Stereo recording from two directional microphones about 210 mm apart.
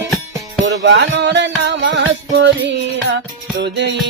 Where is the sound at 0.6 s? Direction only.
55° right (ahead or behind).